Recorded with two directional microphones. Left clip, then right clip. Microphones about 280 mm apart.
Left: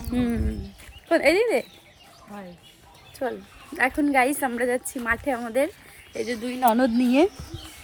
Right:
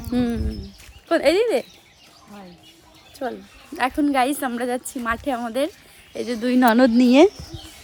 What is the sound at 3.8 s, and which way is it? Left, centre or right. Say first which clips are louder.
Speech: right 1 dB; centre.